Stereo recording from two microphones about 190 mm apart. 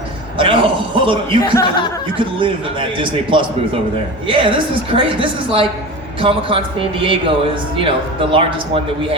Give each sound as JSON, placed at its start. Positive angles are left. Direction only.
{"t": 0.3, "sound": "chuckle", "side_deg": -25}
{"t": 1.4, "sound": "speech", "side_deg": 15}
{"t": 2.1, "sound": "speech", "side_deg": -25}